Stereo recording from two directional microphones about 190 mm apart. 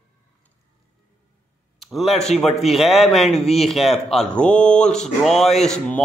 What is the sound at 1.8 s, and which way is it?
Speech, centre (ahead or behind).